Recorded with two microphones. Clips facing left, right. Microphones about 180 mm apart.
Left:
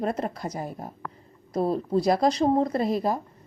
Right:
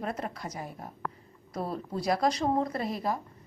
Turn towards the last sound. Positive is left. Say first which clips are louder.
# left 7 dB
turn(degrees=35)  # may be behind; listen again after turning